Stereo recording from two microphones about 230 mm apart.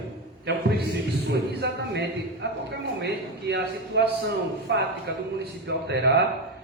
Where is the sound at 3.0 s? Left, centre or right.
Right.